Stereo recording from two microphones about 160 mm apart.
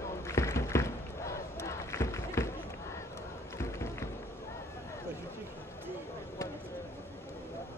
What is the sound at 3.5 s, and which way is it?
Music, 15° left (ahead or behind).